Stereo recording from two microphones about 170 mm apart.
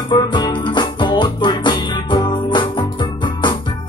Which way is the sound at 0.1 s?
25° left (ahead or behind).